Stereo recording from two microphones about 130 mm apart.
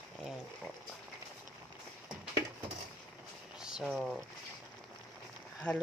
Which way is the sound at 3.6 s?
5° right (ahead or behind).